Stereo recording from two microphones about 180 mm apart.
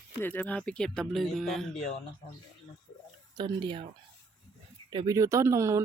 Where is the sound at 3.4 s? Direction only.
25° right (ahead or behind).